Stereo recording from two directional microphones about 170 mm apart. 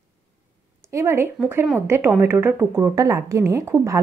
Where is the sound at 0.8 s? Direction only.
15° right (ahead or behind).